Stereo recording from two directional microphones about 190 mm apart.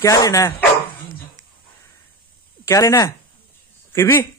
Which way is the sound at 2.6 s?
15° left (ahead or behind).